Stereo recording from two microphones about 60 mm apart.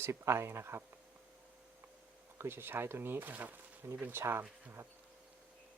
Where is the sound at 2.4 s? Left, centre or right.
Right.